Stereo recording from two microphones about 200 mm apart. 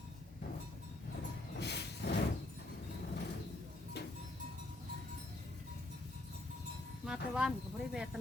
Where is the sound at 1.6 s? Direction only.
55° left (ahead or behind).